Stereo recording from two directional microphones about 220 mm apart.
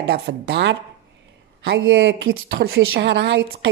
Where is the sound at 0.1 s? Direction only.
50° right (ahead or behind).